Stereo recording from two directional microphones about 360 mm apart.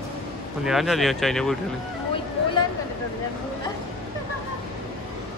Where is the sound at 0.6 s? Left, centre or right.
Centre.